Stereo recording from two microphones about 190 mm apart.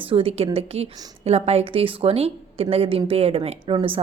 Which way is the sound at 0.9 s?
20° right (ahead or behind).